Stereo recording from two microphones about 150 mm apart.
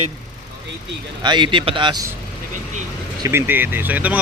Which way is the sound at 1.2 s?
30° right (ahead or behind).